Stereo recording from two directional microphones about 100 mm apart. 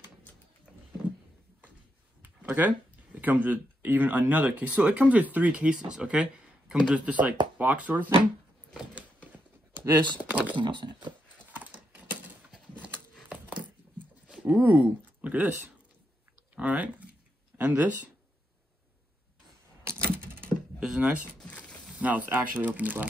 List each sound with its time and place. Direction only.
2.2 s a sound: 15° right (ahead or behind)
3.2 s speech: 15° right (ahead or behind)
9.3 s a sound: 20° right (ahead or behind)
10.3 s speech: 15° right (ahead or behind)
10.6 s speech: 50° right (ahead or behind)
11.5 s a sound: 15° right (ahead or behind)
16.5 s speech: 15° right (ahead or behind)
19.8 s typewriter: 25° right (ahead or behind)
20.8 s speech: 10° right (ahead or behind)
21.4 s mechanisms: 10° left (ahead or behind)
21.9 s speech: 15° right (ahead or behind)